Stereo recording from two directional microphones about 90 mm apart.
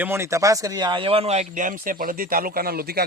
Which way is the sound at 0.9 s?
90° right.